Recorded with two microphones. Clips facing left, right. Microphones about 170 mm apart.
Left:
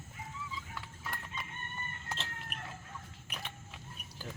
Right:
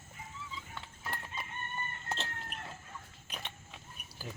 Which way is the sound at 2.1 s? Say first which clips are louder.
Right 2 dB; 30° right (ahead or behind).